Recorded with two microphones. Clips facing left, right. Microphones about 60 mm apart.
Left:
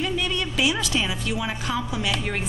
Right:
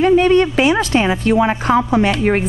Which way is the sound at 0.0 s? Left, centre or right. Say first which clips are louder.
Right 15 dB; right.